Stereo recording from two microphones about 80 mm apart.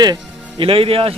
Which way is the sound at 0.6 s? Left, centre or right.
Right.